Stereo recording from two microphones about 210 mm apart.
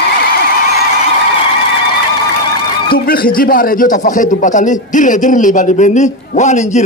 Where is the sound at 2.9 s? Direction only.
45° left (ahead or behind).